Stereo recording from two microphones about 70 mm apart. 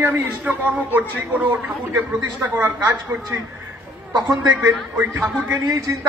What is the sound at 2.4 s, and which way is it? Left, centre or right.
Speech, right.